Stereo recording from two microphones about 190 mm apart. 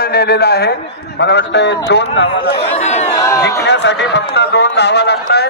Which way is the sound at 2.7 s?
35° left (ahead or behind).